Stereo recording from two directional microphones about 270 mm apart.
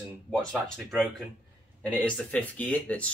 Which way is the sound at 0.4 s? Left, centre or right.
Centre.